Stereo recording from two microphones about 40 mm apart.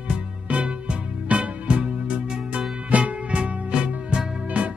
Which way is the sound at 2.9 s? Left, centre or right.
Right.